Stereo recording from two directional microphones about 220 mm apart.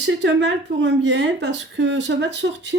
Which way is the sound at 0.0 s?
55° right (ahead or behind).